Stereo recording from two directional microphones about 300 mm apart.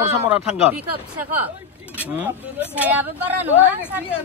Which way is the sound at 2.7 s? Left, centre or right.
Centre.